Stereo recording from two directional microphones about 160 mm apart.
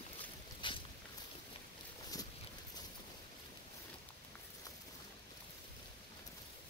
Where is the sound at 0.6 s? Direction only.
30° left (ahead or behind).